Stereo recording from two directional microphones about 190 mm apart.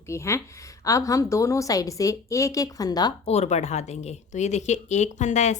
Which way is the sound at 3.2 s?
35° left (ahead or behind).